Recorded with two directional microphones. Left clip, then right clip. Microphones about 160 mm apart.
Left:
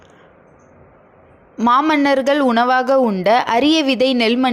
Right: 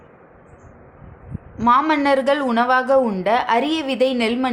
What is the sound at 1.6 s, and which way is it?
A woman's voice, 45° left (ahead or behind).